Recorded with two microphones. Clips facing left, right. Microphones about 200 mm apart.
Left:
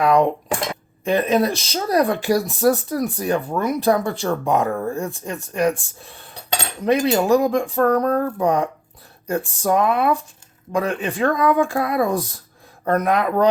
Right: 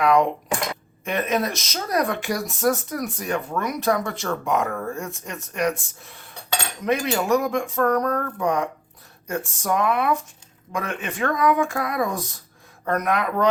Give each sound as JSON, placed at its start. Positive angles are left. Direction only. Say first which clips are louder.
{"t": 0.0, "sound": "speech", "louder": "left 2 dB", "side_deg": 35}